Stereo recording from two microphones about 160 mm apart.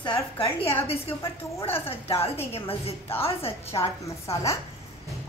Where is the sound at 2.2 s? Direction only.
40° left (ahead or behind).